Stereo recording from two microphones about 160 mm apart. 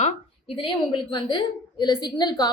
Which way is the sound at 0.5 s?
30° left (ahead or behind).